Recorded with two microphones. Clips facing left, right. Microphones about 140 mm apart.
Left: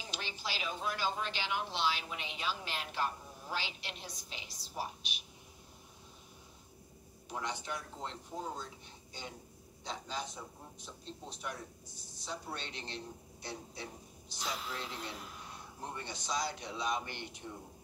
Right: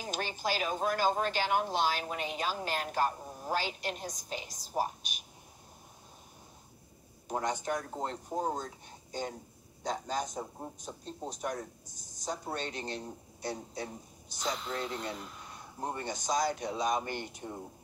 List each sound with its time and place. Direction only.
0.0 s speech: 45° right (ahead or behind)
7.2 s speech: 45° right (ahead or behind)
15.8 s speech: 45° right (ahead or behind)